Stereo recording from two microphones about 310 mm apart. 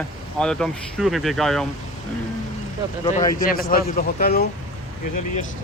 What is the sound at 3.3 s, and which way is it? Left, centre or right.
A man's voice, left.